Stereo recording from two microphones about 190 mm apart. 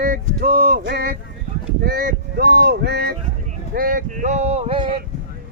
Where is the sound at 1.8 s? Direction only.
50° right (ahead or behind).